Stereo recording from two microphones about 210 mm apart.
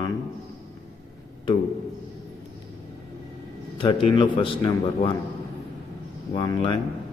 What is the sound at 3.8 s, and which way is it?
A man's voice, 25° left (ahead or behind).